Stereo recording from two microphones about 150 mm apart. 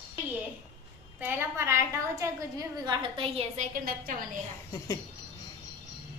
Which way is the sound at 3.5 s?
60° right (ahead or behind).